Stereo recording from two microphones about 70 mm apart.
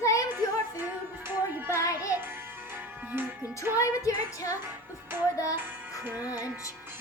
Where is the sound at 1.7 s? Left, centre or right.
Left.